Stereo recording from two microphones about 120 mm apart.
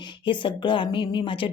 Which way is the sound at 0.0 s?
40° left (ahead or behind).